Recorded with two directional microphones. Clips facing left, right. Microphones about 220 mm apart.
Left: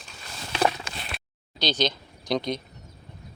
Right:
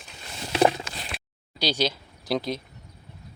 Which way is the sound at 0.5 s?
25° right (ahead or behind).